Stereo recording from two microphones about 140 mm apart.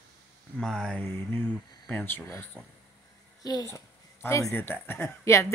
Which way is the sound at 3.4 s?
25° left (ahead or behind).